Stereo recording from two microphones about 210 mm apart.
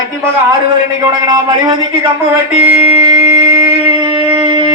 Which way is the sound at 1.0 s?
20° right (ahead or behind).